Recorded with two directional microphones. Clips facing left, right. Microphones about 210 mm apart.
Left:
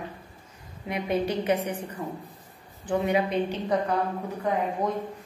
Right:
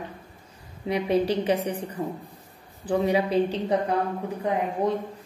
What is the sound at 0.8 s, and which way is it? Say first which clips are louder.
Speech: right 4 dB; 30° right (ahead or behind).